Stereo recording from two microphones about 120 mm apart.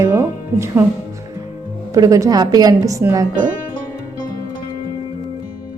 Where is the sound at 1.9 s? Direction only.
30° right (ahead or behind).